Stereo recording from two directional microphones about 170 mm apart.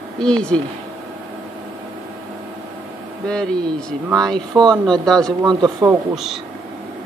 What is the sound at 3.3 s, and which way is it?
Speech, 5° left (ahead or behind).